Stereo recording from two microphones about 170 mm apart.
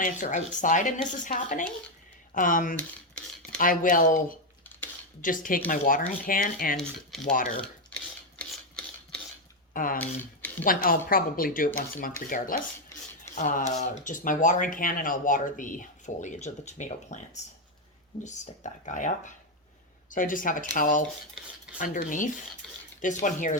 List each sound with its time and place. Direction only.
0.0 s speech: 45° left (ahead or behind)
6.7 s speech: centre (ahead or behind)
7.3 s speech: 50° left (ahead or behind)
7.6 s a sound: 5° left (ahead or behind)
9.7 s speech: 55° left (ahead or behind)
18.2 s speech: 45° left (ahead or behind)